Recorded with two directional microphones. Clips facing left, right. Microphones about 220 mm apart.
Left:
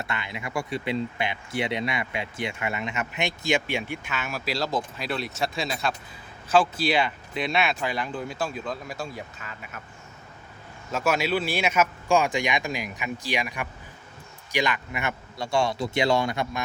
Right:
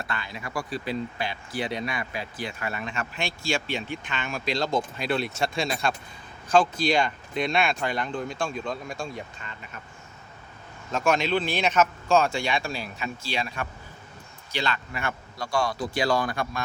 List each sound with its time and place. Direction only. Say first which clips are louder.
0.0 s speech: left 1 dB; 20° left (ahead or behind); by 9.8 s 5° left (ahead or behind)
10.9 s speech: right 1 dB; 5° left (ahead or behind)